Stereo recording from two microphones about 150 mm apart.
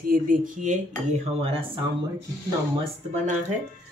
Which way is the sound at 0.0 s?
70° right (ahead or behind).